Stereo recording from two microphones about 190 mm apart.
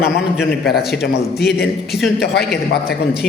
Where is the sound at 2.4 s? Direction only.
55° left (ahead or behind).